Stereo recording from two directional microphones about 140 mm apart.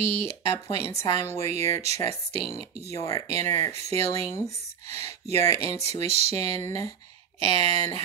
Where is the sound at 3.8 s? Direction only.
50° right (ahead or behind).